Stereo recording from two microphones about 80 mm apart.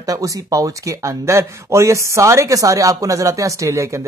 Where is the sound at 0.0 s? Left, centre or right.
Right.